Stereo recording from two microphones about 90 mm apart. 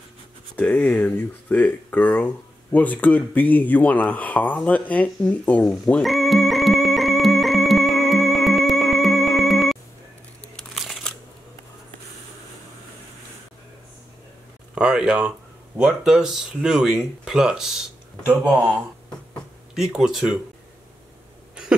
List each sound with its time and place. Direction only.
0.6 s speech: 15° left (ahead or behind)
6.0 s music: centre (ahead or behind)
10.5 s crumpling: centre (ahead or behind)
14.8 s speech: 10° right (ahead or behind)
18.6 s a sound: 10° left (ahead or behind)
19.7 s speech: 5° right (ahead or behind)